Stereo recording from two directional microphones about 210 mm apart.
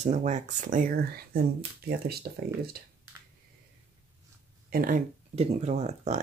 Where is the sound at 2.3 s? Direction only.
45° right (ahead or behind).